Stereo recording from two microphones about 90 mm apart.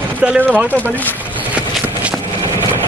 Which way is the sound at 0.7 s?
20° left (ahead or behind).